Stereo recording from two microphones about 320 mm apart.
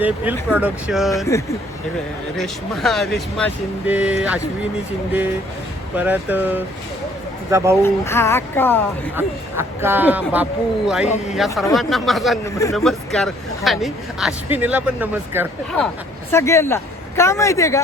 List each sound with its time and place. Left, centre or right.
0.0 s speech: centre
1.2 s speech: centre
6.0 s speech: centre
7.8 s speech: centre
9.1 s speech: centre
11.0 s speech: left
11.3 s speech: centre
16.3 s speech: centre